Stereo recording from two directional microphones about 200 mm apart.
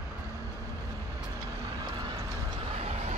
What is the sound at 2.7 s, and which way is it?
Vehicle, 30° right (ahead or behind).